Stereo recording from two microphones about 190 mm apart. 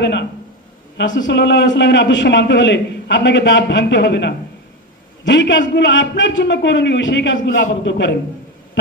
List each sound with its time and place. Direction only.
0.0 s a man's voice: 65° left (ahead or behind)